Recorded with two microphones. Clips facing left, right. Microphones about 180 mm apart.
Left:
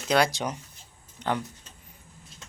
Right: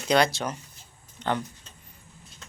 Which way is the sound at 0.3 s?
15° left (ahead or behind).